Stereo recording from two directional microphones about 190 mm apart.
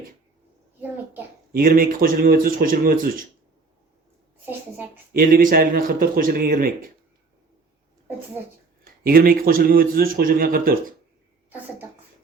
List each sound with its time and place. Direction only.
1.5 s a man's voice: 50° right (ahead or behind)
5.1 s a man's voice: 50° right (ahead or behind)
8.8 s a man's voice: 50° right (ahead or behind)